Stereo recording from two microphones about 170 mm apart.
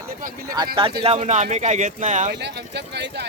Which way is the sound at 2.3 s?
80° right.